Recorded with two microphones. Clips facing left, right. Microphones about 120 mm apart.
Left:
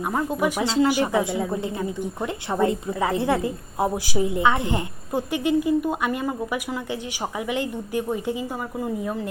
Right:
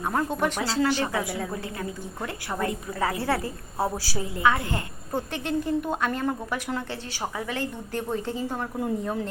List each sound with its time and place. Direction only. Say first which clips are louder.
0.0 s a woman's voice: left 2 dB; 10° left (ahead or behind)
0.6 s a woman's voice: left 7 dB; 20° left (ahead or behind); by 9.3 s 5° left (ahead or behind)